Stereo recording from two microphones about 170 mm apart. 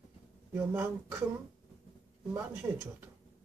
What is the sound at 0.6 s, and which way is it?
Speech, 10° right (ahead or behind).